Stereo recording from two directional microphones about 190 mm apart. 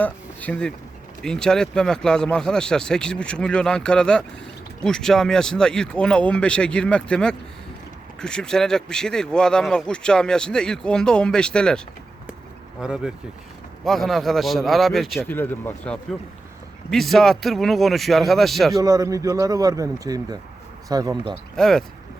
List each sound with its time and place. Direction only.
0.0 s speech: 10° left (ahead or behind)
12.8 s speech: 5° right (ahead or behind)
18.8 s speech: 20° right (ahead or behind)
21.5 s speech: centre (ahead or behind)